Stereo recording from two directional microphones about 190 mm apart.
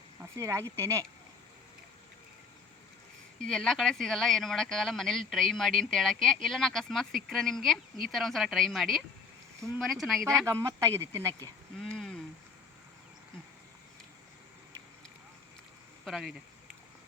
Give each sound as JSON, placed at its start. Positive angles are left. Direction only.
{"t": 0.3, "sound": "speech", "side_deg": -15}
{"t": 3.4, "sound": "speech", "side_deg": 5}
{"t": 10.4, "sound": "speech", "side_deg": -15}
{"t": 11.8, "sound": "a sound", "side_deg": 5}
{"t": 16.0, "sound": "speech", "side_deg": 0}